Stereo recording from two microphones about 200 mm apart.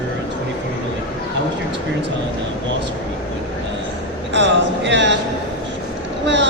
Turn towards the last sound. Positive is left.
turn(degrees=-65)  # may be behind; listen again after turning